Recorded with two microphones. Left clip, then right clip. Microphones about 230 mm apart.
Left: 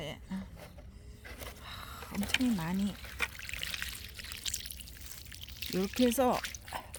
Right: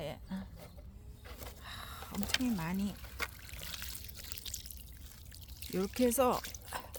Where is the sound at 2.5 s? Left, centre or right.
Centre.